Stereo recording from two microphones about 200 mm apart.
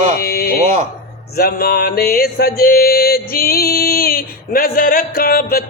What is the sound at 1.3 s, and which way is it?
Music, 50° left (ahead or behind).